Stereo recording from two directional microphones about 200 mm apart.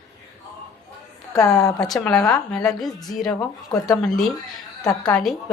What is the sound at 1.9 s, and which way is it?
A woman's voice, 5° left (ahead or behind).